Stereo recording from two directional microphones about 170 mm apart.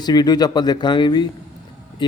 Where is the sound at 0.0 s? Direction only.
25° left (ahead or behind).